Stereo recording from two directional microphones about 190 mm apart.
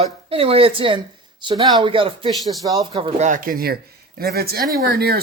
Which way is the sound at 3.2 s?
45° right (ahead or behind).